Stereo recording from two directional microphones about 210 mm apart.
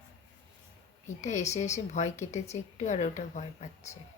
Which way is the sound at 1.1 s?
35° left (ahead or behind).